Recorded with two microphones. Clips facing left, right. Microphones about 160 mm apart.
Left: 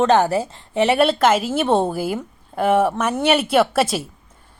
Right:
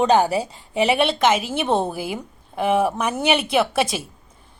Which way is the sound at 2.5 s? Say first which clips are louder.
Left 2 dB; centre (ahead or behind).